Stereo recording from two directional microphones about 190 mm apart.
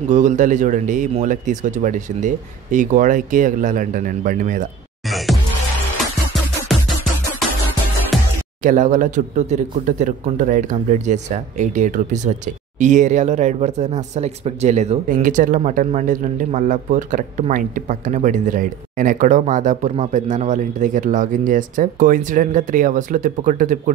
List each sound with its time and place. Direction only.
0.1 s speech: 40° right (ahead or behind)
5.1 s music: centre (ahead or behind)
8.1 s music: centre (ahead or behind)
8.6 s speech: 40° right (ahead or behind)